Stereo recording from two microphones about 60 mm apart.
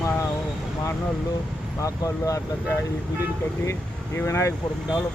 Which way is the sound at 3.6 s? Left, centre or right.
Left.